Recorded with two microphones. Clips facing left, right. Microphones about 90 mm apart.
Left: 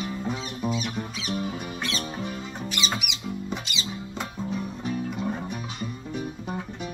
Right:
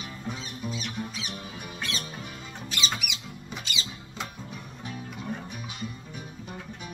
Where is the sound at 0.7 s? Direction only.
15° left (ahead or behind).